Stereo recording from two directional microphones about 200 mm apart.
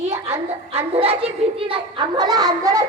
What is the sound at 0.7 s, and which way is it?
A child's voice, 30° right (ahead or behind).